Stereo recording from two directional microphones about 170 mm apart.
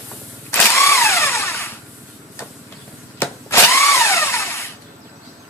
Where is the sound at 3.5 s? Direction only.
15° left (ahead or behind).